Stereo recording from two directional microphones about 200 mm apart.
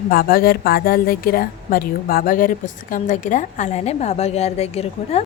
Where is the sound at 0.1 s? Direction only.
50° left (ahead or behind).